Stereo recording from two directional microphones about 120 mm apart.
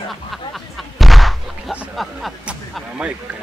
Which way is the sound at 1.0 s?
Centre (ahead or behind).